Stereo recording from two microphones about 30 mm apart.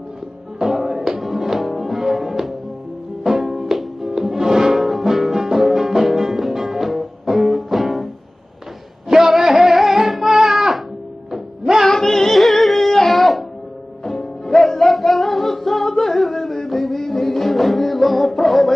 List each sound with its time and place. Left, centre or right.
0.7 s music: centre
4.7 s music: centre
9.1 s music: centre
11.9 s music: centre
12.4 s music: centre
14.0 s music: centre
14.9 s music: centre